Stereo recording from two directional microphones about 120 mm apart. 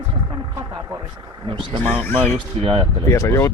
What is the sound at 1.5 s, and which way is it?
Speech, 40° right (ahead or behind).